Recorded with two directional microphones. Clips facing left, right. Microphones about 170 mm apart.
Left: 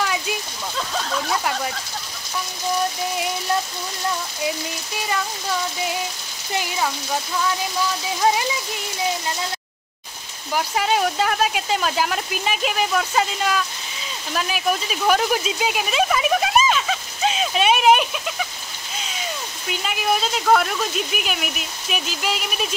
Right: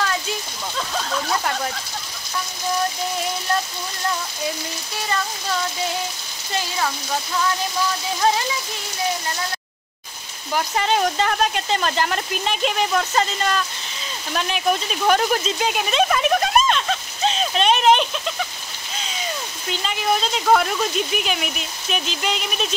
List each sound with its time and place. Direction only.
0.7 s a sound: centre (ahead or behind)
4.9 s rain on surface: 10° left (ahead or behind)
8.2 s rain on surface: 10° left (ahead or behind)
10.5 s speech: 5° left (ahead or behind)
19.7 s speech: 5° left (ahead or behind)